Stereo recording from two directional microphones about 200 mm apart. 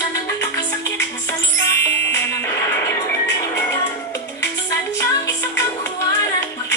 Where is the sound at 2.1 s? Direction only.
10° left (ahead or behind).